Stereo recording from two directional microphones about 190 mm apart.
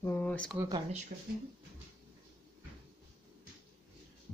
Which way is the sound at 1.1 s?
50° right (ahead or behind).